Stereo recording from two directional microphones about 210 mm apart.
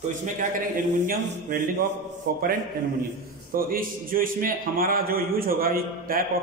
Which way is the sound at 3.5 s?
45° right (ahead or behind).